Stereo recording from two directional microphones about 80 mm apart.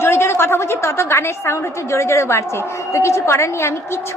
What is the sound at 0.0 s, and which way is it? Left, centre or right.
A woman's voice, left.